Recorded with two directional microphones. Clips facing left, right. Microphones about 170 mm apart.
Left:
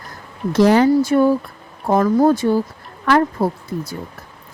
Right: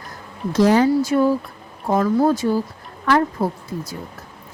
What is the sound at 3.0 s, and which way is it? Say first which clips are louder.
Speech: left 2 dB; 75° left (ahead or behind).